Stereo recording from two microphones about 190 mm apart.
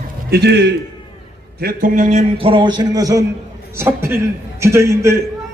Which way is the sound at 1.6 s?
50° right (ahead or behind).